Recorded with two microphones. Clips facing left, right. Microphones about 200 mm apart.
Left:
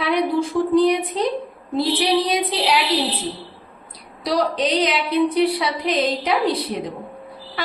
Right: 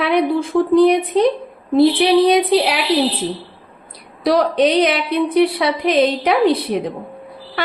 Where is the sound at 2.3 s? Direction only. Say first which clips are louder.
Right 7 dB; 60° right (ahead or behind).